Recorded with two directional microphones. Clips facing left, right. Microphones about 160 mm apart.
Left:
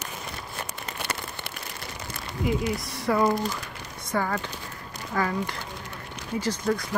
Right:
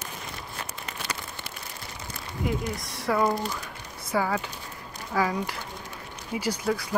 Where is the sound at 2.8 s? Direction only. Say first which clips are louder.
Left 2 dB; centre (ahead or behind).